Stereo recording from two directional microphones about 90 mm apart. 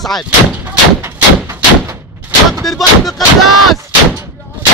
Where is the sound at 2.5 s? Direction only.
Centre (ahead or behind).